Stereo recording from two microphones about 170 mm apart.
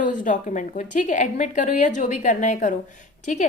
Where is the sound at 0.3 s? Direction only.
50° left (ahead or behind).